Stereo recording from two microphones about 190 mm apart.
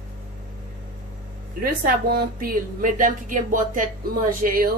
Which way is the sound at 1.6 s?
50° right (ahead or behind).